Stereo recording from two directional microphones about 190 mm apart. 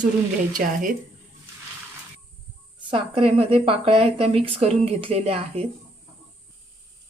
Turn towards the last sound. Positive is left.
turn(degrees=-30)  # may be behind; listen again after turning